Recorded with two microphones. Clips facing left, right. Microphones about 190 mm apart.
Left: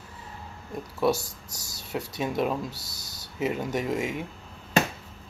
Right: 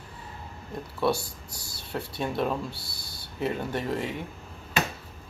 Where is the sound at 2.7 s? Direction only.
40° left (ahead or behind).